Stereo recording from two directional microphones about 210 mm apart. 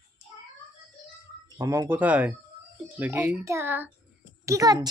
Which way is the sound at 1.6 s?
15° right (ahead or behind).